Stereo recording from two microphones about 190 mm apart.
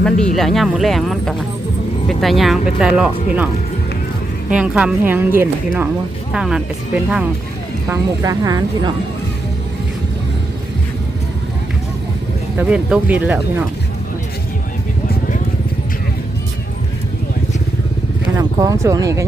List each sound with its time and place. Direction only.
0.3 s speech: centre (ahead or behind)
7.9 s speech: 20° right (ahead or behind)
12.5 s speech: 5° right (ahead or behind)
18.3 s speech: 15° right (ahead or behind)